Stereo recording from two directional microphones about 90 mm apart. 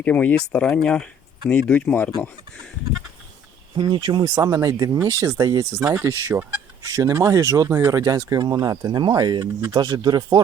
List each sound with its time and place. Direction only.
0.0 s speech: 15° left (ahead or behind)
3.8 s speech: 60° right (ahead or behind)
4.4 s speech: 40° right (ahead or behind)
5.9 s speech: 30° right (ahead or behind); by 10.4 s 50° right (ahead or behind)